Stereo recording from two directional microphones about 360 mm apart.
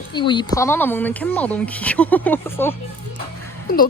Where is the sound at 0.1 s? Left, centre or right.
Centre.